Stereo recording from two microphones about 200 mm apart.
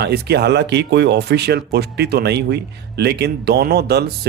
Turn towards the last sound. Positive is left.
turn(degrees=-55)  # may be behind; listen again after turning